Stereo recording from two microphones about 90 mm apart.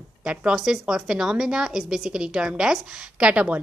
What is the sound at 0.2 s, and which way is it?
A woman's voice, 10° right (ahead or behind).